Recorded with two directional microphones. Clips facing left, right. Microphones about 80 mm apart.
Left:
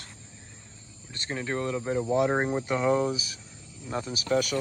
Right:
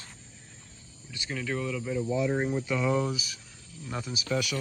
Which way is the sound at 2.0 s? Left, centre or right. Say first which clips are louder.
Left 4 dB; left.